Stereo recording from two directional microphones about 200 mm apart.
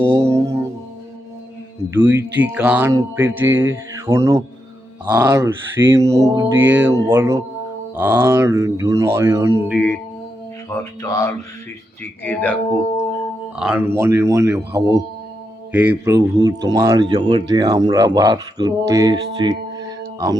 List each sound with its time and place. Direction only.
0.1 s music: 15° right (ahead or behind)
1.9 s speech: 10° right (ahead or behind)
9.7 s speech: 10° left (ahead or behind)
13.6 s speech: 10° right (ahead or behind)